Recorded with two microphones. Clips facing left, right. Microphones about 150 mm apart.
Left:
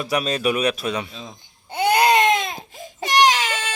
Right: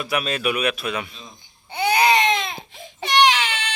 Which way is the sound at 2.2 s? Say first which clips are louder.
Left 3 dB; 45° left (ahead or behind).